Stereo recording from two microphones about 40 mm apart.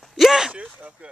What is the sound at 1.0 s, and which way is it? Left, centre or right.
Speech, right.